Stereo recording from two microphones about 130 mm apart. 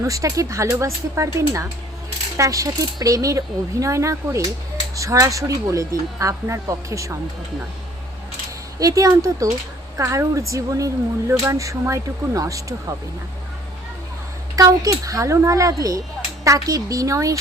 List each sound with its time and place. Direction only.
0.0 s speech: 25° right (ahead or behind)
8.8 s speech: 25° right (ahead or behind)
14.5 s speech: 25° right (ahead or behind)